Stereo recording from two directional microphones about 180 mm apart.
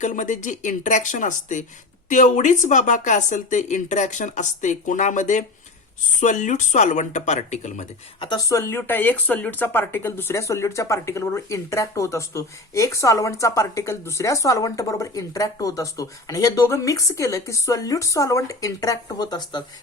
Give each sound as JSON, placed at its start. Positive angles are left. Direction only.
{"t": 0.0, "sound": "speech", "side_deg": 45}
{"t": 8.2, "sound": "speech", "side_deg": 20}